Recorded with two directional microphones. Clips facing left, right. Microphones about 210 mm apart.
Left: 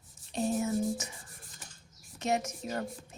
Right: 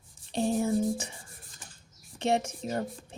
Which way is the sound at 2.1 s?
30° right (ahead or behind).